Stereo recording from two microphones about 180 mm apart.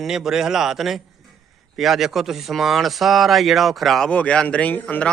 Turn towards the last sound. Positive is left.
turn(degrees=10)  # may be behind; listen again after turning